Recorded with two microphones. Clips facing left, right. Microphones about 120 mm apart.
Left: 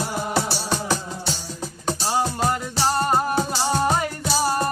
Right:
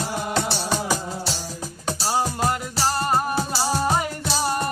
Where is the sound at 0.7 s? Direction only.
5° right (ahead or behind).